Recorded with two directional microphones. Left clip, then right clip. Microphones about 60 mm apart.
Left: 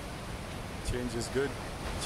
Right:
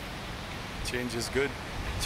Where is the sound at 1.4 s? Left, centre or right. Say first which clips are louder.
Right 3 dB; right.